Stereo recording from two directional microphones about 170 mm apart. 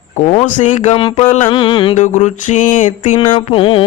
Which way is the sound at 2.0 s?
45° left (ahead or behind).